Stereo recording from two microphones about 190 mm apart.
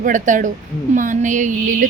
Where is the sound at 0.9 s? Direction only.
40° right (ahead or behind).